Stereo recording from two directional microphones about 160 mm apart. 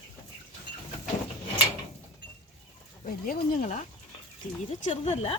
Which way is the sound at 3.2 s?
60° left (ahead or behind).